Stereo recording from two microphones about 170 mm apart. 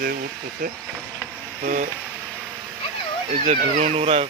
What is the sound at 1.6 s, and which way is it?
Speech, 50° right (ahead or behind).